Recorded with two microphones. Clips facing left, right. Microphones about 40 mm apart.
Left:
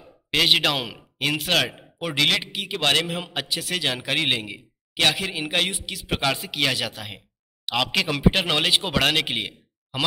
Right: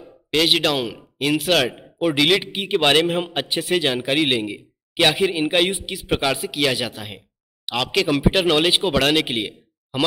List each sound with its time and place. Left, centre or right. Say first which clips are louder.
0.3 s a man's voice: right 2 dB; centre
2.5 s a man's voice: right 5 dB; right
3.1 s a man's voice: right 8 dB; right
3.3 s a man's voice: right 4 dB; right
3.6 s a man's voice: right 7 dB; centre